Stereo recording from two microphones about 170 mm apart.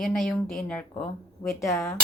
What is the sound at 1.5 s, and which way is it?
Cutlery, 15° left (ahead or behind).